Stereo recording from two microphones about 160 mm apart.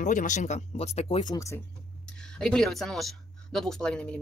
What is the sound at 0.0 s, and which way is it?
Speech, 55° left (ahead or behind).